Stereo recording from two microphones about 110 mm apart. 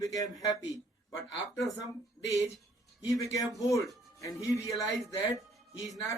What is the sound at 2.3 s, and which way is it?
A man's voice, 30° left (ahead or behind).